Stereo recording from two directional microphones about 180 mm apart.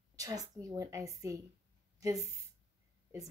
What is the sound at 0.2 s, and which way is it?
A woman's voice, 20° right (ahead or behind).